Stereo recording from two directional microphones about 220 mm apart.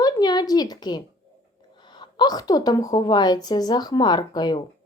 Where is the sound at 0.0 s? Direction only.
20° left (ahead or behind).